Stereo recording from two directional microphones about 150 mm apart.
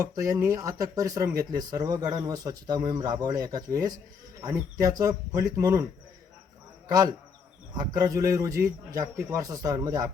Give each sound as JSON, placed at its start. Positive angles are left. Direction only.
{"t": 0.0, "sound": "speech", "side_deg": -25}
{"t": 7.8, "sound": "speech", "side_deg": -25}